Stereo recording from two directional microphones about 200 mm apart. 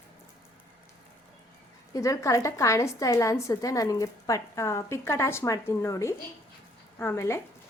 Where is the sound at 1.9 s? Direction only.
15° left (ahead or behind).